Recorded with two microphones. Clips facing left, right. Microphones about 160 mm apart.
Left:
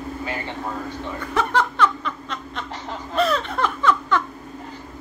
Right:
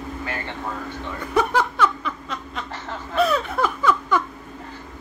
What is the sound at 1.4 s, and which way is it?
Snicker, 10° right (ahead or behind).